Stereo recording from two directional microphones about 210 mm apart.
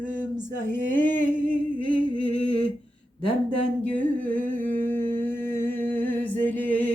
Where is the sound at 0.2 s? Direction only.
10° left (ahead or behind).